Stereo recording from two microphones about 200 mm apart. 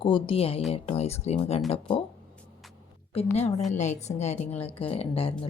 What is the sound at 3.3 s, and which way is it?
A woman's voice, 35° left (ahead or behind).